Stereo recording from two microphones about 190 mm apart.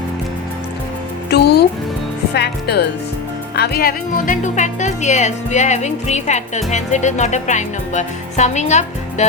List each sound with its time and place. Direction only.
1.3 s music: 60° left (ahead or behind)
2.3 s speech: 60° left (ahead or behind); by 9.2 s 40° left (ahead or behind)